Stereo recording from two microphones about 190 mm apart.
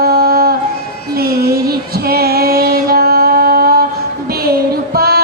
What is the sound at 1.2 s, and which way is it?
Music, 50° right (ahead or behind).